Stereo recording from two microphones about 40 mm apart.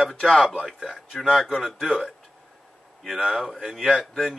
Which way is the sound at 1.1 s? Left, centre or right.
Centre.